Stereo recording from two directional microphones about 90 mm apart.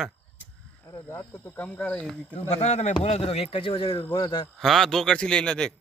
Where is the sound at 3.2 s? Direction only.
90° left.